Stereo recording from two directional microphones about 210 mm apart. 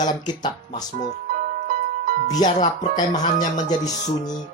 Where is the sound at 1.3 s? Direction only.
40° right (ahead or behind).